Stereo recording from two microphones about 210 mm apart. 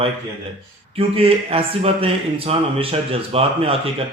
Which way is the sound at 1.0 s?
25° right (ahead or behind).